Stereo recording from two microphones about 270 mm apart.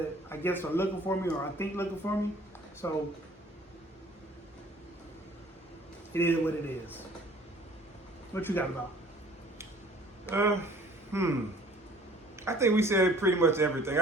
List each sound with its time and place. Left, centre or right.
0.3 s speech: centre
6.1 s speech: centre
8.3 s speech: centre
10.2 s a man's voice: centre
11.1 s a sound: centre
12.4 s a man's voice: centre